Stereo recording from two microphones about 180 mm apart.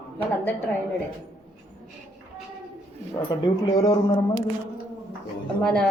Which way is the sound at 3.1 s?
20° left (ahead or behind).